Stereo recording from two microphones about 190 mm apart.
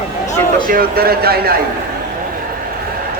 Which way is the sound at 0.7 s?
50° right (ahead or behind).